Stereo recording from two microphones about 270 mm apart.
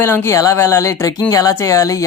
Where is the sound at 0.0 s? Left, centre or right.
Centre.